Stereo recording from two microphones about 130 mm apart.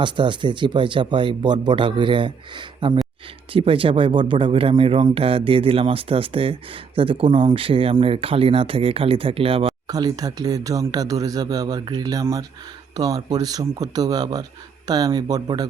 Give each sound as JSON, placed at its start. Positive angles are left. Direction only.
{"t": 0.0, "sound": "speech", "side_deg": -35}
{"t": 9.8, "sound": "speech", "side_deg": -30}